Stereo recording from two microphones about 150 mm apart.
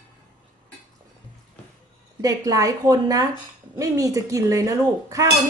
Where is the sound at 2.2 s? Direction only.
25° right (ahead or behind).